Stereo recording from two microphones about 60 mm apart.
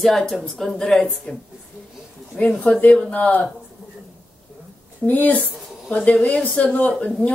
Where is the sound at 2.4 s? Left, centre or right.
Centre.